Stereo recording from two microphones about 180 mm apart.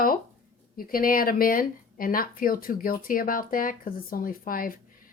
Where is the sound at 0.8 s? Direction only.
55° left (ahead or behind).